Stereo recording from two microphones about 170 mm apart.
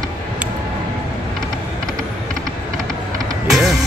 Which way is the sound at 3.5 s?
Centre (ahead or behind).